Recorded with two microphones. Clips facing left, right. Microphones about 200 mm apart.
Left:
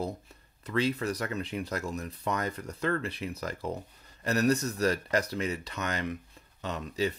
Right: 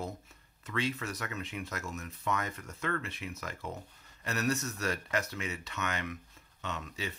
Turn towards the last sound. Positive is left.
turn(degrees=35)  # may be behind; listen again after turning